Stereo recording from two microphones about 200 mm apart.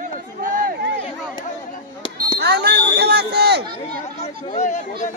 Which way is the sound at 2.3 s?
55° right (ahead or behind).